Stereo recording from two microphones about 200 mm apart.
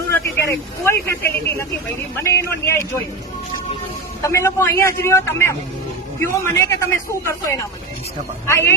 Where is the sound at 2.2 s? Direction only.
15° left (ahead or behind).